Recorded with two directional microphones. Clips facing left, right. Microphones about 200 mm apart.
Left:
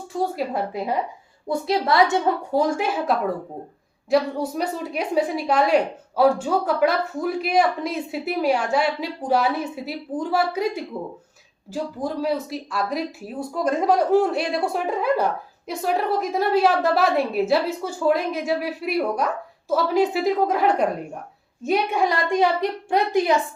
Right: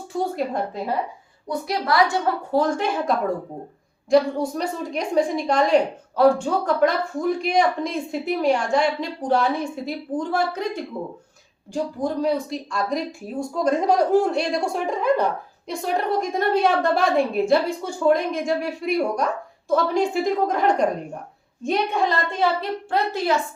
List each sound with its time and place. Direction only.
0.1 s speech: centre (ahead or behind)
1.5 s a woman's voice: 25° left (ahead or behind)